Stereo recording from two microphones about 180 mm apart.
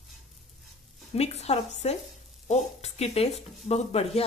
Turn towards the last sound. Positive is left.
turn(degrees=35)  # may be behind; listen again after turning